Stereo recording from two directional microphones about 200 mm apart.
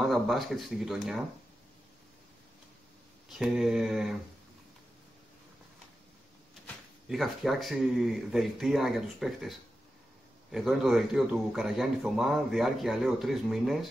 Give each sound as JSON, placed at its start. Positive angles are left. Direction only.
{"t": 0.0, "sound": "speech", "side_deg": 0}
{"t": 3.3, "sound": "speech", "side_deg": 0}
{"t": 7.1, "sound": "speech", "side_deg": 0}